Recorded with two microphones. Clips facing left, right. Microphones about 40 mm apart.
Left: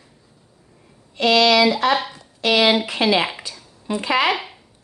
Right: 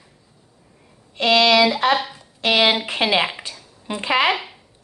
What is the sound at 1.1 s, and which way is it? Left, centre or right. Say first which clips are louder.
A woman's voice: even; right.